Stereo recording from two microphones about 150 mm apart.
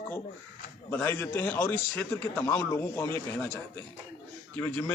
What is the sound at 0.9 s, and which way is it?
Speech, 15° left (ahead or behind).